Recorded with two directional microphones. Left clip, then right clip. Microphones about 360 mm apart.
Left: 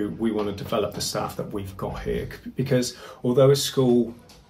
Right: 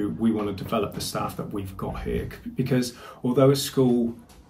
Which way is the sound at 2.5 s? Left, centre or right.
Centre.